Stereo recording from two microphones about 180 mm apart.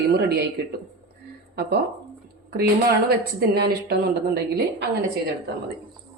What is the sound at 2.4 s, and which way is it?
Speech, 60° right (ahead or behind).